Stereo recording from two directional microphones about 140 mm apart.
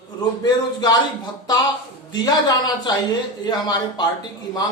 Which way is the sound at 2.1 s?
30° left (ahead or behind).